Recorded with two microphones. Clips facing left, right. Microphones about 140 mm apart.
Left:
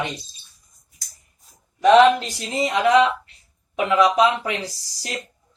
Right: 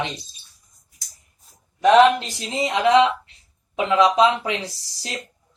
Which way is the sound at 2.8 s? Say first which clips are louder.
Right 1 dB; 25° right (ahead or behind).